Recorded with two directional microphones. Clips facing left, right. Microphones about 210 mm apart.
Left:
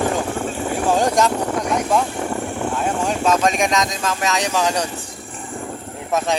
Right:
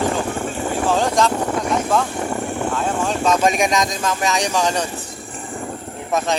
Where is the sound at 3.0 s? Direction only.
5° left (ahead or behind).